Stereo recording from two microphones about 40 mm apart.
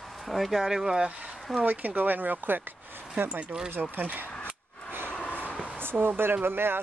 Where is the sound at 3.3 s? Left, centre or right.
Right.